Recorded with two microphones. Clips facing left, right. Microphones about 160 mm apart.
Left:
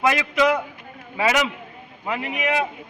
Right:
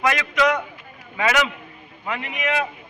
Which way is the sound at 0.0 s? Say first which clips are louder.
Left 1 dB; 25° left (ahead or behind).